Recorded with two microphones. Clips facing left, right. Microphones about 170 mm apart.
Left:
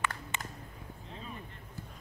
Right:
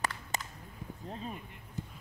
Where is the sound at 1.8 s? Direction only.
20° right (ahead or behind).